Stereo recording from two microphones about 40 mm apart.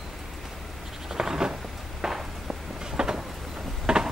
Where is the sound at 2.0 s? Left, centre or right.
Centre.